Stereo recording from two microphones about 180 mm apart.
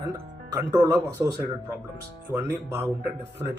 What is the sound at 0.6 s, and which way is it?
Speech, 15° right (ahead or behind).